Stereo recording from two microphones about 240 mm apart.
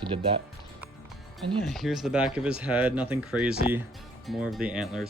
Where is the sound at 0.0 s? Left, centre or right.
Right.